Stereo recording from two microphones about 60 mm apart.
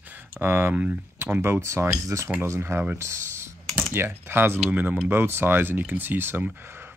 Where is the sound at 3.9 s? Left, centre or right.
Right.